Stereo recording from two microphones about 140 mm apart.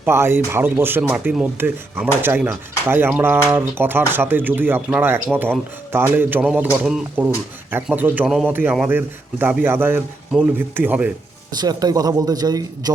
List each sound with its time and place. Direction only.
0.0 s speech: 15° right (ahead or behind)
11.5 s speech: 30° right (ahead or behind)